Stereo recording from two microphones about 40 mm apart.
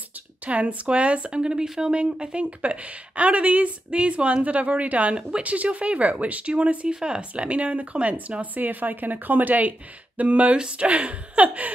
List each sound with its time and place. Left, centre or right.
0.5 s speech: right
8.5 s a woman's voice: right